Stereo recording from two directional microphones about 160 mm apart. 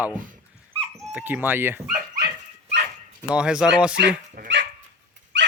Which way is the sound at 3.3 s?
5° right (ahead or behind).